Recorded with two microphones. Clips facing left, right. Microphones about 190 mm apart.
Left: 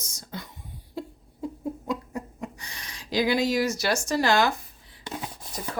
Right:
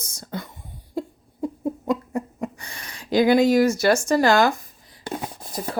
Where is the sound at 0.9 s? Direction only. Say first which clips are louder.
Right 7 dB; 50° right (ahead or behind).